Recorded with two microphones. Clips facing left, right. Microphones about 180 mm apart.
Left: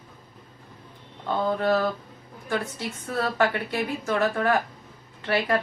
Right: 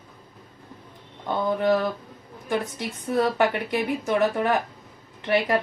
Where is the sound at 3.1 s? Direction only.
20° right (ahead or behind).